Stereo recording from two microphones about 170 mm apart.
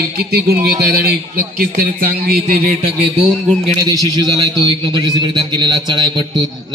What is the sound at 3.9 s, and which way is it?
A man's voice, 25° right (ahead or behind).